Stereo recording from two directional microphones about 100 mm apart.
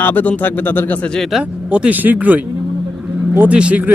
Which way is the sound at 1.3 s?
5° right (ahead or behind).